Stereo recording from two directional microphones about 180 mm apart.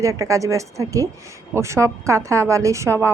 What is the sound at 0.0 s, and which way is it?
A woman's voice, 15° right (ahead or behind).